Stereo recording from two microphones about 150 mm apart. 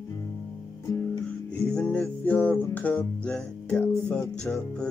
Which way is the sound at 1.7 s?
10° left (ahead or behind).